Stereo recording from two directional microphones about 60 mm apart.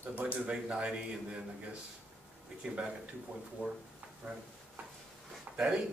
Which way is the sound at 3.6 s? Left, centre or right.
Right.